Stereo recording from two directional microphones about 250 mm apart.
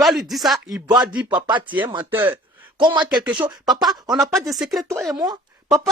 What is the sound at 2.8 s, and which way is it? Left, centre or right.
Speech, centre.